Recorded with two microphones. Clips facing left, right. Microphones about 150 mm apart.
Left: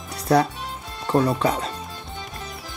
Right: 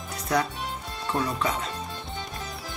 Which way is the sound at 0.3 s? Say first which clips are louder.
Left 7 dB; 35° left (ahead or behind).